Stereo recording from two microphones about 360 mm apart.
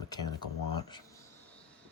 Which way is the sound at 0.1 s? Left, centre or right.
Centre.